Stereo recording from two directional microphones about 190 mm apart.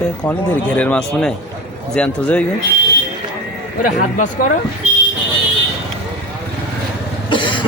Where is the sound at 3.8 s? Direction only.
45° left (ahead or behind).